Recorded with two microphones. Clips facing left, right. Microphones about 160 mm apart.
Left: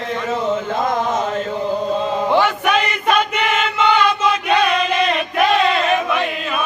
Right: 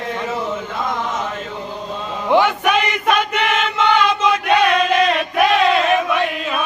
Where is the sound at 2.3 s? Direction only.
15° right (ahead or behind).